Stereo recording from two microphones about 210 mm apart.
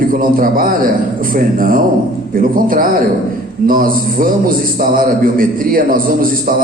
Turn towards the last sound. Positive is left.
turn(degrees=-40)  # may be behind; listen again after turning